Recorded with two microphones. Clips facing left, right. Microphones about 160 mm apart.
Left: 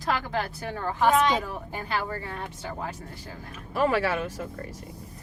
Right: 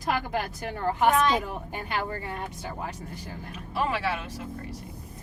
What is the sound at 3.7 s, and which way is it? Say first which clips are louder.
Speech: left 4 dB; 45° left (ahead or behind).